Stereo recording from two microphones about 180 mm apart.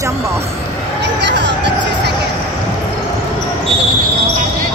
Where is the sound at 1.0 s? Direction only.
75° right (ahead or behind).